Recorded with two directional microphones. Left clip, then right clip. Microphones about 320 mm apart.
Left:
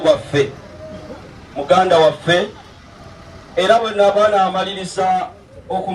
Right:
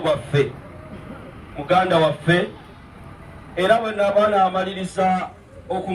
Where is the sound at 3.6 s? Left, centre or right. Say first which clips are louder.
Left 5 dB; left.